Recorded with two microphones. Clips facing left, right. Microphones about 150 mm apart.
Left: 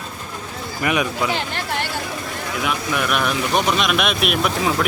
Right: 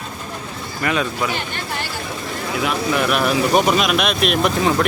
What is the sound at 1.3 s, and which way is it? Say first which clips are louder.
Speech: left 2 dB; 90° left.